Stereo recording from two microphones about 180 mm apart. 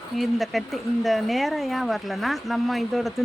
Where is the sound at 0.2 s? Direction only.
Centre (ahead or behind).